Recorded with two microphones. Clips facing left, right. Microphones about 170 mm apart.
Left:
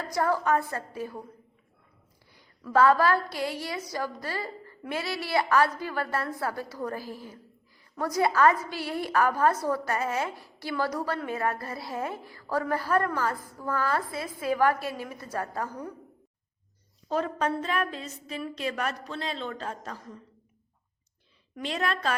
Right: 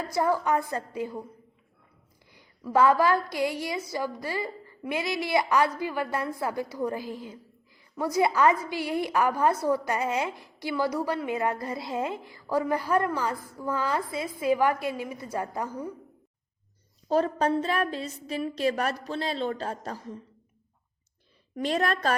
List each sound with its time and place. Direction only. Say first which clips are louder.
0.0 s a woman's voice: right 1 dB; 15° right (ahead or behind)
2.3 s a sound: even; 15° right (ahead or behind)
3.2 s a woman's voice: right 3 dB; 15° right (ahead or behind)
17.1 s a woman's voice: right 4 dB; 35° right (ahead or behind)
21.5 s a woman's voice: right 4 dB; 40° right (ahead or behind)